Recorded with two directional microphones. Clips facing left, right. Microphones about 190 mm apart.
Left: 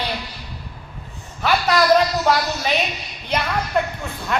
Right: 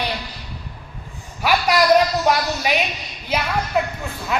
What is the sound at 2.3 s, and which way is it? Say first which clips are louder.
Speech: left 2 dB; 15° right (ahead or behind).